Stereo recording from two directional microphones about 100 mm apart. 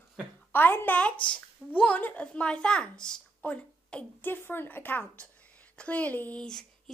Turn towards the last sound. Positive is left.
turn(degrees=10)  # may be behind; listen again after turning